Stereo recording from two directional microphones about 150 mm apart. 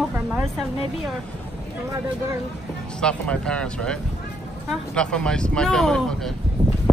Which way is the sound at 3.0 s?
5° left (ahead or behind).